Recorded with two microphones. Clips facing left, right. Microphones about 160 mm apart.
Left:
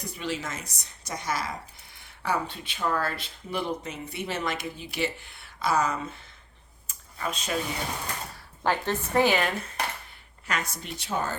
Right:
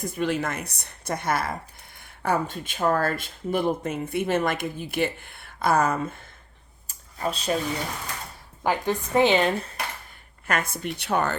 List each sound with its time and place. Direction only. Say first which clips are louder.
0.0 s speech: right 7 dB; 50° right (ahead or behind)
6.8 s a sound: right 4 dB; 35° right (ahead or behind)
8.6 s a woman's voice: right 2 dB; 15° right (ahead or behind)
10.4 s speech: right 5 dB; 55° right (ahead or behind)